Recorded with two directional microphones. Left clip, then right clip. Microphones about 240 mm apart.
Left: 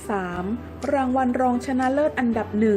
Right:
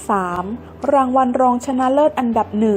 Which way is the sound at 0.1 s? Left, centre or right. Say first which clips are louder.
Right 8 dB; centre.